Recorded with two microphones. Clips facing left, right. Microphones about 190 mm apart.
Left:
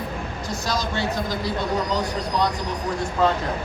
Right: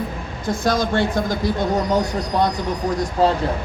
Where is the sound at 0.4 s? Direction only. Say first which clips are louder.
Right 8 dB; 55° right (ahead or behind).